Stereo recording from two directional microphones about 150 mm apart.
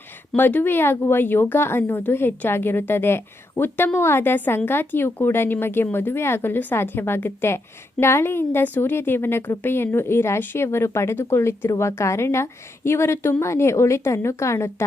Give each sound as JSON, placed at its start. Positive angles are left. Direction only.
{"t": 0.3, "sound": "speech", "side_deg": 10}